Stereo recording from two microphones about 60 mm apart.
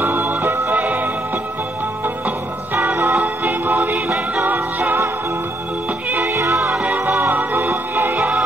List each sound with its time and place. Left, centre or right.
0.0 s music: right
0.7 s music: right
3.4 s music: right
6.2 s music: right
6.9 s music: right